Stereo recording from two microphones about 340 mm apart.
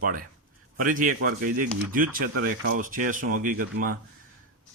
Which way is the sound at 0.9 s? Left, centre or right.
Right.